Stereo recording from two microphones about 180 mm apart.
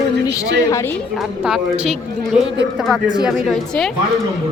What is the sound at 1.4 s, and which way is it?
Speech, 5° right (ahead or behind).